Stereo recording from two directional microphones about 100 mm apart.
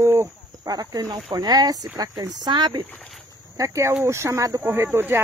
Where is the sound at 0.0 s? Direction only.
30° right (ahead or behind); by 2.8 s 50° right (ahead or behind).